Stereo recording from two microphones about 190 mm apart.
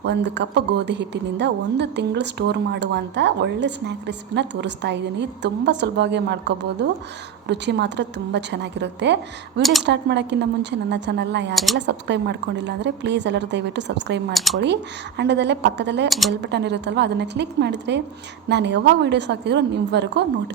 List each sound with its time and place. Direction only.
0.0 s a woman's voice: 65° right (ahead or behind)
11.5 s speech: centre (ahead or behind)
11.9 s a woman's voice: 65° right (ahead or behind)
14.3 s speech: centre (ahead or behind)
15.2 s a woman's voice: 65° right (ahead or behind)
16.0 s speech: centre (ahead or behind)
16.4 s a woman's voice: 65° right (ahead or behind)